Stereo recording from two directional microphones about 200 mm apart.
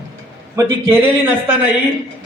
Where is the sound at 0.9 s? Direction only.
10° right (ahead or behind).